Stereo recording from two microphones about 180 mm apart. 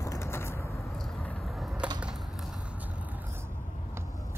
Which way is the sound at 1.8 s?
5° right (ahead or behind).